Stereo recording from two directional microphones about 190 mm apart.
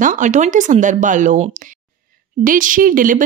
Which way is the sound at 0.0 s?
40° right (ahead or behind).